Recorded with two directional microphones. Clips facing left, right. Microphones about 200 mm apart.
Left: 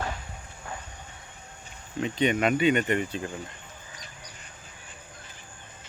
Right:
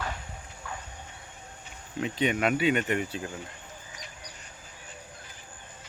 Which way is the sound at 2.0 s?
5° right (ahead or behind).